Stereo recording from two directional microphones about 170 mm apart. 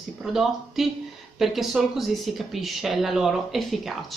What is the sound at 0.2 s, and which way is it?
Speech, centre (ahead or behind).